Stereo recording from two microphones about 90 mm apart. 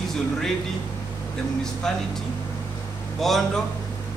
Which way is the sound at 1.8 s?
5° left (ahead or behind).